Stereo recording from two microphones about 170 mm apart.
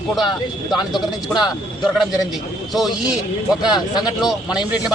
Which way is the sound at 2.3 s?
Centre (ahead or behind).